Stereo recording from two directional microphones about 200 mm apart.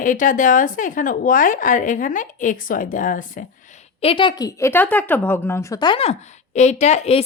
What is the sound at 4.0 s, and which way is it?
A woman's voice, 25° left (ahead or behind).